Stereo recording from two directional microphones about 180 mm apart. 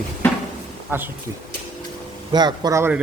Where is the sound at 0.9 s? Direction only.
10° right (ahead or behind).